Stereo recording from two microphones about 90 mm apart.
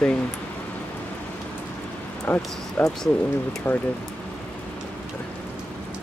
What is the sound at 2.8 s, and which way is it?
Speech, 5° left (ahead or behind).